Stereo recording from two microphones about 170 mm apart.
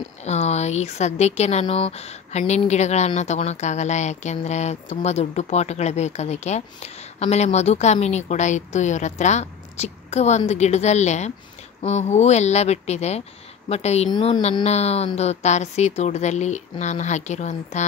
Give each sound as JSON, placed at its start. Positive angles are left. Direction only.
{"t": 0.2, "sound": "speech", "side_deg": 40}